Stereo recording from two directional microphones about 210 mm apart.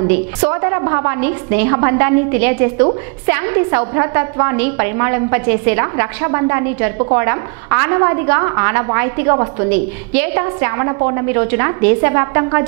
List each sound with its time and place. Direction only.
0.4 s a woman's voice: 20° right (ahead or behind)
9.7 s a woman's voice: 10° right (ahead or behind)